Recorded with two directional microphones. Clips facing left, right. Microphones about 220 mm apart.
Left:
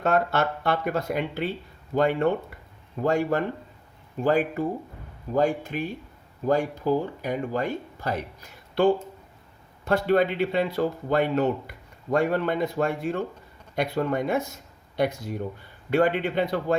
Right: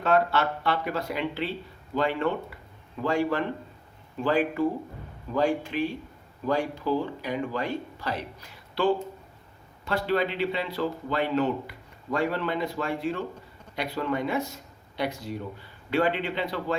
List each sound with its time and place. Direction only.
0.0 s speech: 45° left (ahead or behind)